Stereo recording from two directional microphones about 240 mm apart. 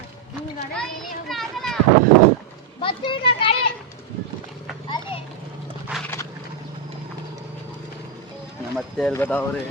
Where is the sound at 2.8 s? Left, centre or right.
Left.